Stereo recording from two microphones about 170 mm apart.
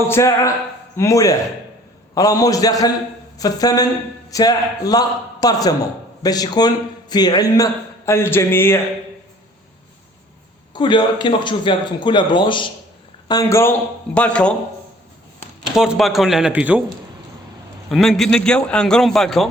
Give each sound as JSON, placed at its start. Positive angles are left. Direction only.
{"t": 0.1, "sound": "a man's voice", "side_deg": 15}
{"t": 10.8, "sound": "a man's voice", "side_deg": 25}
{"t": 15.7, "sound": "a man's voice", "side_deg": -5}
{"t": 17.9, "sound": "a man's voice", "side_deg": 0}